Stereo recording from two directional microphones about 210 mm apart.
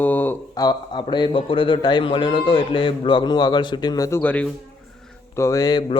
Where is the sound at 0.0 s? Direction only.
10° left (ahead or behind).